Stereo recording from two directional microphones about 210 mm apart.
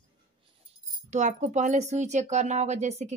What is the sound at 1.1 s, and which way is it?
Speech, 35° right (ahead or behind).